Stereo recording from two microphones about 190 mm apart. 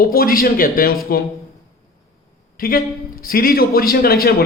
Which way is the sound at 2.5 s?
50° left (ahead or behind).